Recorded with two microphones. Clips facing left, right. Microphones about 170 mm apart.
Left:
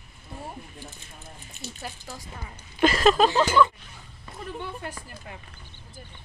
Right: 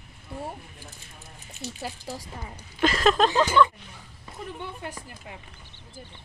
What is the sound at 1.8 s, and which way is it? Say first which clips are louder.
Speech: right 4 dB; 35° right (ahead or behind).